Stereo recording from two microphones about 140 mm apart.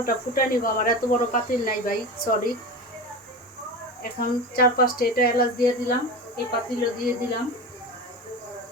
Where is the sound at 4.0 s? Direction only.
90° left.